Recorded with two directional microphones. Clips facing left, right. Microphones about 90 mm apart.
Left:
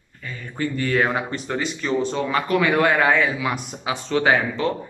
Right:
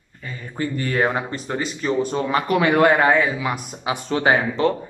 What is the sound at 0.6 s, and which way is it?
Speech, 25° right (ahead or behind).